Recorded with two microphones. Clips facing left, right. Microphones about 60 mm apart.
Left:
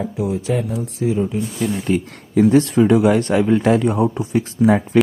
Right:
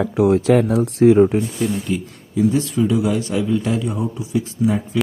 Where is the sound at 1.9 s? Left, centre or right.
Left.